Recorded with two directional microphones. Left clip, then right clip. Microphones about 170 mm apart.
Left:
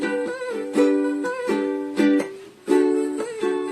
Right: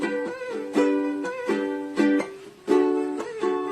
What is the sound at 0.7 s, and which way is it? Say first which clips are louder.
Music: left 3 dB; 25° left (ahead or behind).